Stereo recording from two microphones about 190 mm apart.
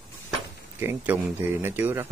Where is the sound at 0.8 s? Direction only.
10° right (ahead or behind).